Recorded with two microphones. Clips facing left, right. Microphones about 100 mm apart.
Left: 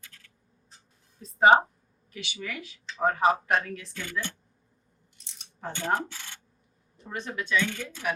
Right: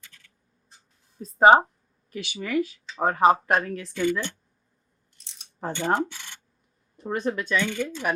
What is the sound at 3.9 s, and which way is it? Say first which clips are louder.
Speech: right 11 dB; 20° right (ahead or behind).